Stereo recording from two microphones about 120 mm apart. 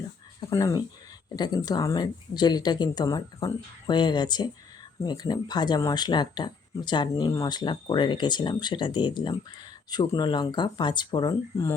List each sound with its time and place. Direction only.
0.5 s speech: 30° left (ahead or behind)